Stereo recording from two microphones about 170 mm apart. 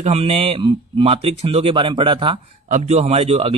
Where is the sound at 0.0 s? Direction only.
35° right (ahead or behind).